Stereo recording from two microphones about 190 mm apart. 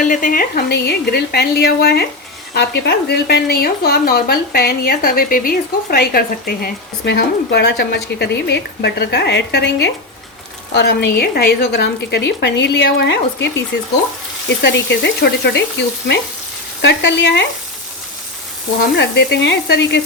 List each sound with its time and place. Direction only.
0.0 s speech: 45° left (ahead or behind); by 13.5 s 65° left (ahead or behind)
14.6 s speech: 65° left (ahead or behind)
16.8 s speech: 65° left (ahead or behind)
18.9 s speech: 65° left (ahead or behind)